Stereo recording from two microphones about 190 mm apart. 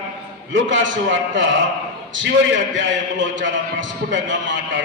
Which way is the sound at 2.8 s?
80° right.